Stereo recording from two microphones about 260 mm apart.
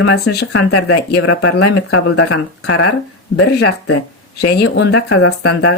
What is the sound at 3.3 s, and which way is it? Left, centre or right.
Speech, left.